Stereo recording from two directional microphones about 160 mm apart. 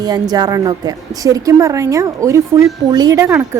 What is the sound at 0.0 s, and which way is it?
A woman's voice, 25° right (ahead or behind).